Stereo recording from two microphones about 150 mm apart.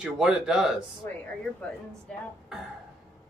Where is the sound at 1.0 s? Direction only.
15° left (ahead or behind).